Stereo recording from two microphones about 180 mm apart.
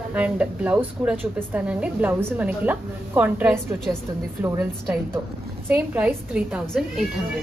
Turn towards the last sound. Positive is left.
turn(degrees=-5)  # may be behind; listen again after turning